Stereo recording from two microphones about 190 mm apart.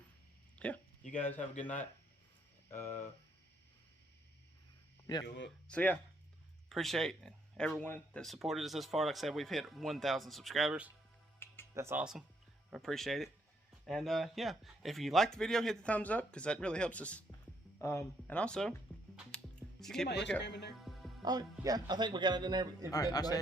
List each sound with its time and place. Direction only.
0.6 s speech: 5° left (ahead or behind)
5.1 s a man's voice: 20° left (ahead or behind)
5.6 s speech: 5° left (ahead or behind)
19.1 s music: 5° left (ahead or behind)
20.1 s speech: 65° left (ahead or behind)
20.7 s music: centre (ahead or behind)
21.2 s a man's voice: 20° right (ahead or behind)
22.9 s a man's voice: 20° left (ahead or behind)